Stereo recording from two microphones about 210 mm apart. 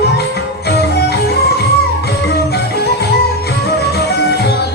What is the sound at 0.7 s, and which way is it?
Music, 50° left (ahead or behind).